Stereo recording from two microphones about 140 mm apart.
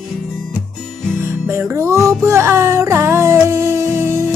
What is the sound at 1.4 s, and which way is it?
Music, 20° right (ahead or behind).